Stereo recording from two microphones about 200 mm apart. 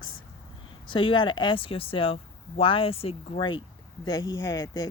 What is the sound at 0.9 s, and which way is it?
Speech, 25° left (ahead or behind).